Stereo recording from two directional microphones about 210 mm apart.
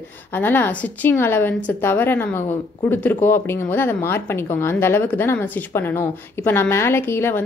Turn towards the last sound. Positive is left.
turn(degrees=10)  # may be behind; listen again after turning